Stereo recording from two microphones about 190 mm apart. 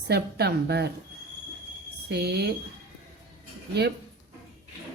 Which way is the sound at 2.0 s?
60° right (ahead or behind).